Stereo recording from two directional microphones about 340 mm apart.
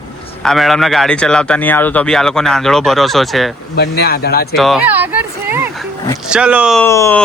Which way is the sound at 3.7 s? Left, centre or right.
Left.